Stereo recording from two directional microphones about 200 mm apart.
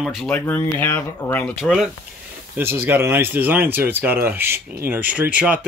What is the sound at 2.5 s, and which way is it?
Speech, 10° right (ahead or behind).